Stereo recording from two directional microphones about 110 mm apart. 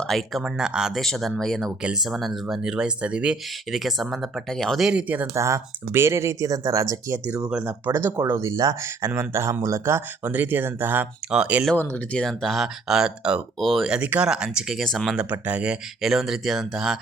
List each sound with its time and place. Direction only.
0.0 s speech: centre (ahead or behind)
4.9 s speech: 10° right (ahead or behind)
5.3 s speech: 30° right (ahead or behind)
7.5 s speech: 15° right (ahead or behind)
11.8 s speech: 20° left (ahead or behind)
12.1 s speech: 5° left (ahead or behind)